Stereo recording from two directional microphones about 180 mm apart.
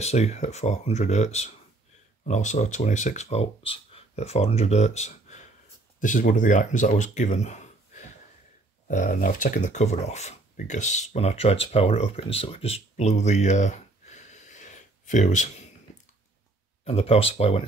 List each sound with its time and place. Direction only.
0.0 s speech: 40° left (ahead or behind)
16.8 s speech: 35° left (ahead or behind)